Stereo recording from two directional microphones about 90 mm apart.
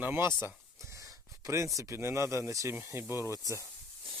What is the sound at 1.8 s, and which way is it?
Speech, 30° right (ahead or behind).